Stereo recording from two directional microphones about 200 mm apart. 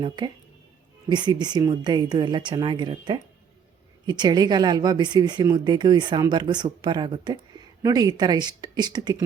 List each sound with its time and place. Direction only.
1.1 s a woman's voice: 20° right (ahead or behind)